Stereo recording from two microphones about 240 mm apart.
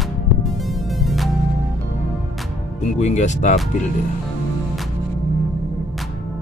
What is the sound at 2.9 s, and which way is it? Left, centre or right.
Speech, left.